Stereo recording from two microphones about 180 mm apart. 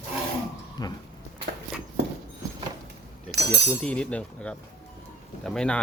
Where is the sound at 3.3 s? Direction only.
70° right (ahead or behind).